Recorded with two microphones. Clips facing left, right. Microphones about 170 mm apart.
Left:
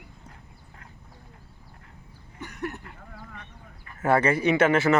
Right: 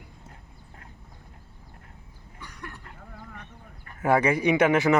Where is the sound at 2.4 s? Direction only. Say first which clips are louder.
Left 9 dB; 45° left (ahead or behind).